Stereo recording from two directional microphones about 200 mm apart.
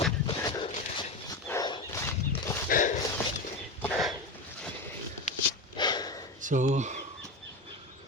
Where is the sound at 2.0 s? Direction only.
15° left (ahead or behind).